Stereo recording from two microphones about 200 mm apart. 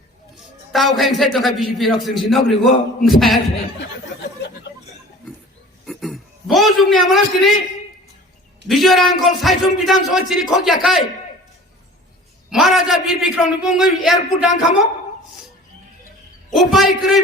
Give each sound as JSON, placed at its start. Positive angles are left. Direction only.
{"t": 0.7, "sound": "speech", "side_deg": 0}
{"t": 5.8, "sound": "a sound", "side_deg": 0}
{"t": 8.6, "sound": "speech", "side_deg": 0}
{"t": 12.5, "sound": "speech", "side_deg": 0}
{"t": 16.5, "sound": "speech", "side_deg": 0}